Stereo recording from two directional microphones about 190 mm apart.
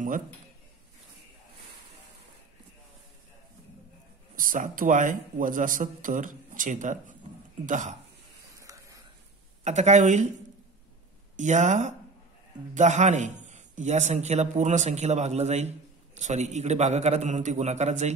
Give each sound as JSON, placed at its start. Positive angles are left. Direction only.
{"t": 4.4, "sound": "a man's voice", "side_deg": -45}
{"t": 8.5, "sound": "a sound", "side_deg": -15}
{"t": 9.7, "sound": "a man's voice", "side_deg": -35}
{"t": 11.3, "sound": "a man's voice", "side_deg": -40}